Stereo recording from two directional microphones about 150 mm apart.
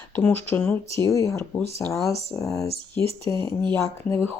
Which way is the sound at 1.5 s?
10° left (ahead or behind).